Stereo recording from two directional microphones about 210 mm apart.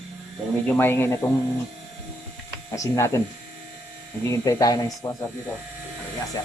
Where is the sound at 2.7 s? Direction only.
15° left (ahead or behind).